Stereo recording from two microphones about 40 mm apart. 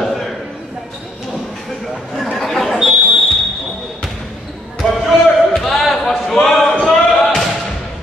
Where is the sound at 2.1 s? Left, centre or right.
Centre.